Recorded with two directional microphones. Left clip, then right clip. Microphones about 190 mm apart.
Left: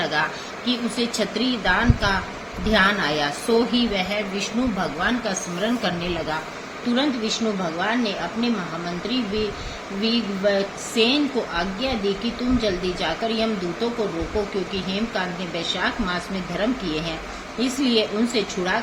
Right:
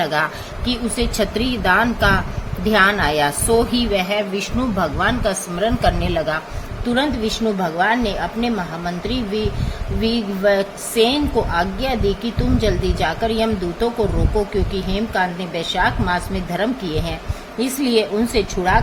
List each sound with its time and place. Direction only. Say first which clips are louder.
0.0 s a woman's voice: right 4 dB; 65° right (ahead or behind)
10.0 s a woman's voice: right 3 dB; 60° right (ahead or behind)
14.7 s a woman's voice: right 4 dB; 60° right (ahead or behind)